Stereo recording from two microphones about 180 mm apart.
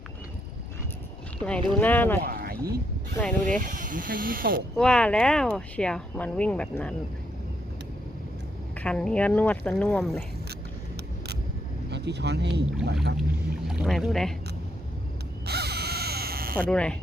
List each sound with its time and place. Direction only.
1.4 s speech: 5° left (ahead or behind)
2.2 s a sound: 55° right (ahead or behind)
3.2 s speech: 5° left (ahead or behind)
3.6 s speech: 45° right (ahead or behind)
4.8 s speech: 5° left (ahead or behind)
8.7 s speech: 5° left (ahead or behind)
11.9 s speech: 70° right (ahead or behind)
13.7 s speech: centre (ahead or behind)
15.4 s a sound: 65° right (ahead or behind)
16.6 s speech: 5° left (ahead or behind)